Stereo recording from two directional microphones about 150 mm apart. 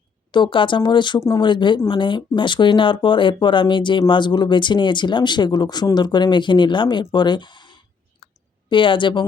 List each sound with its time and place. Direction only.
0.3 s speech: 30° left (ahead or behind)
8.2 s clicking: 35° left (ahead or behind)
8.7 s speech: 35° left (ahead or behind)